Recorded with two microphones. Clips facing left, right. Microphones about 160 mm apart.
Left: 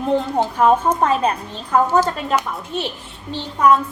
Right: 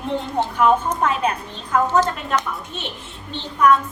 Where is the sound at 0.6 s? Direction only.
35° left (ahead or behind).